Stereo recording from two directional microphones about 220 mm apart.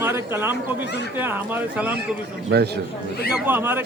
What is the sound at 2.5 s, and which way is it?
Speech, 50° right (ahead or behind).